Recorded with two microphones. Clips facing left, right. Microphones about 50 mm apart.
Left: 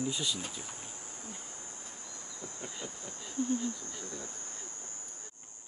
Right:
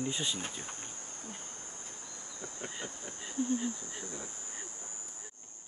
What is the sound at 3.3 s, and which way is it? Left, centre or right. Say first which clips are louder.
Speech: even; centre.